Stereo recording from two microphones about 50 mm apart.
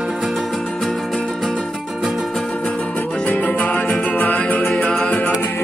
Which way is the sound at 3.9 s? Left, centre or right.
Left.